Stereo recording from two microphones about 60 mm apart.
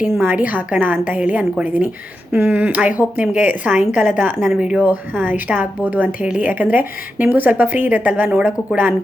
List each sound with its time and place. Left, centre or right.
0.1 s a woman's voice: right
0.3 s a woman's voice: right
4.4 s speech: centre
4.8 s a woman's voice: right